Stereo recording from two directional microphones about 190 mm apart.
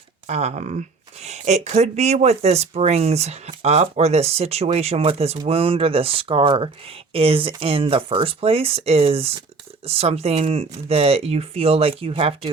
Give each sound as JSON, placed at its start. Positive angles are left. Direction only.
{"t": 0.3, "sound": "speech", "side_deg": -35}